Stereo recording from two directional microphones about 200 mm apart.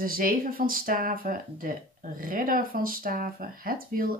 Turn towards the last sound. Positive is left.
turn(degrees=-45)  # may be behind; listen again after turning